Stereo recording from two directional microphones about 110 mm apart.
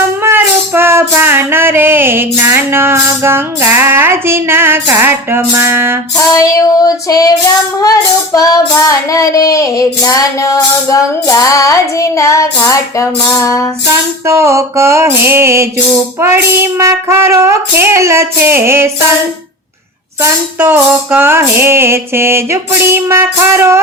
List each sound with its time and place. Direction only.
0.2 s music: 20° right (ahead or behind)
6.3 s child singing: 30° left (ahead or behind)
14.3 s music: 25° right (ahead or behind)
20.6 s music: 15° right (ahead or behind)